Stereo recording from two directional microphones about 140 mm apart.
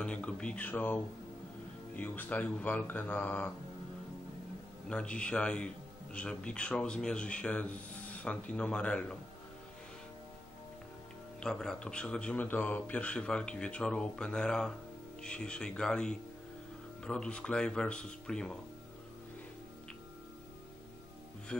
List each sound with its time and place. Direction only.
0.0 s speech: 10° left (ahead or behind)
4.8 s speech: 5° left (ahead or behind)
11.3 s speech: 5° left (ahead or behind)
21.5 s speech: 5° left (ahead or behind)